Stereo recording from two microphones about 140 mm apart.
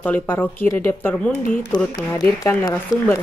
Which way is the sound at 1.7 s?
30° left (ahead or behind).